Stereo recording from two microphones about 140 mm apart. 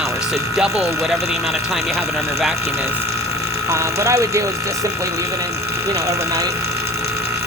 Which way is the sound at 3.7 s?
20° right (ahead or behind).